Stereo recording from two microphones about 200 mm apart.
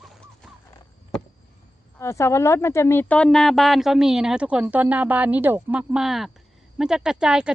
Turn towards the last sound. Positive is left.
turn(degrees=-5)  # may be behind; listen again after turning